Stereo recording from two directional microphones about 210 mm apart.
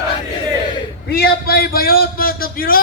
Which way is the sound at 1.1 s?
50° left (ahead or behind).